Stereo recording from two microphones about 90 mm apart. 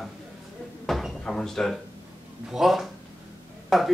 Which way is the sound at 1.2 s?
5° left (ahead or behind).